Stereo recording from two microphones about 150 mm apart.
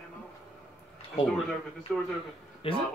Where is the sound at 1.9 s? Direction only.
5° right (ahead or behind).